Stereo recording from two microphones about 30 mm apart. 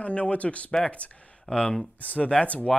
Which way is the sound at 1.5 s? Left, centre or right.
Left.